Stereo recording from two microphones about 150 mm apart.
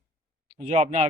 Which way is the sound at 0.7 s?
45° right (ahead or behind).